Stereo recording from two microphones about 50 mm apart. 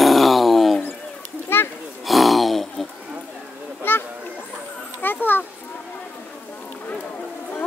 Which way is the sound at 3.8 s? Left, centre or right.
Left.